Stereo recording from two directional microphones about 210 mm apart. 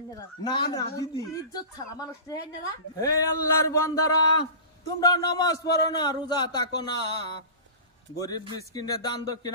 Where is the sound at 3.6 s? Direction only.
15° left (ahead or behind).